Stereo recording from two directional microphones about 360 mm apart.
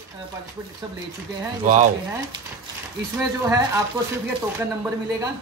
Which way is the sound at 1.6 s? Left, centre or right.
Centre.